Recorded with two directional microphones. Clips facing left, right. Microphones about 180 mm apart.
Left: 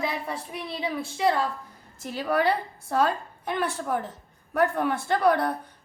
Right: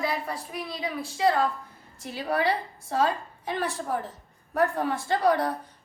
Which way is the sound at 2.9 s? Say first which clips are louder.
Left 1 dB; 60° left (ahead or behind).